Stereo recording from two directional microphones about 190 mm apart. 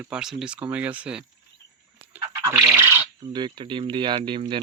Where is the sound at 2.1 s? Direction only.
15° right (ahead or behind).